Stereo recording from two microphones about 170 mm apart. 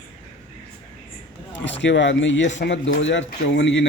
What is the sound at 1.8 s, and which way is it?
Speech, 90° left.